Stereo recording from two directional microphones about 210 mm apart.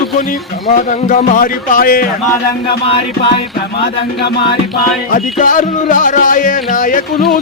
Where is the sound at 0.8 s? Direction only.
35° left (ahead or behind).